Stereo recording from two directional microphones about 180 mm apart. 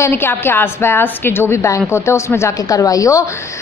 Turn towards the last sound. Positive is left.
turn(degrees=20)  # may be behind; listen again after turning